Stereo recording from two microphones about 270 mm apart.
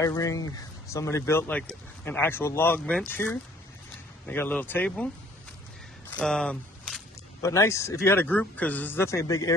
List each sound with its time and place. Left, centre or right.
0.0 s speech: centre
6.0 s a sound: centre
7.4 s speech: centre